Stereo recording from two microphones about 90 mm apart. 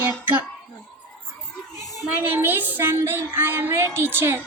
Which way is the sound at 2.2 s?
25° right (ahead or behind).